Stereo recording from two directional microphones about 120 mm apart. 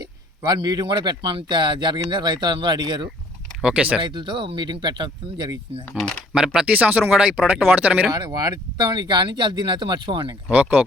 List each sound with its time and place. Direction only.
0.0 s a man's voice: 35° right (ahead or behind)
3.6 s speech: 10° right (ahead or behind)
4.0 s a man's voice: 40° right (ahead or behind)
6.0 s speech: 10° left (ahead or behind)
6.3 s speech: 5° right (ahead or behind)
8.1 s a man's voice: 30° right (ahead or behind)
10.5 s speech: 10° right (ahead or behind)